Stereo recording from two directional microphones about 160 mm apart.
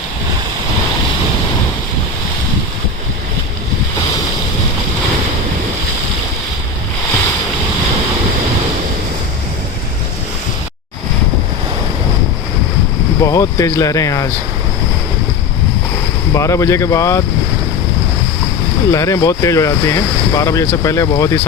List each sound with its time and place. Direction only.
13.2 s speech: 20° left (ahead or behind)
16.3 s speech: 20° left (ahead or behind)
18.9 s speech: 20° left (ahead or behind)